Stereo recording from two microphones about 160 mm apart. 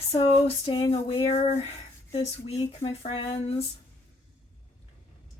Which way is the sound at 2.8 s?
40° left (ahead or behind).